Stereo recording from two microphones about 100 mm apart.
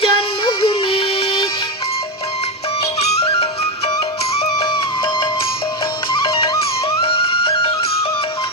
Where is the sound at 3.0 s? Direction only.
90° left.